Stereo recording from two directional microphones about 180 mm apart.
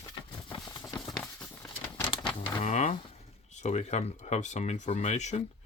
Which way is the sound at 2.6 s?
40° left (ahead or behind).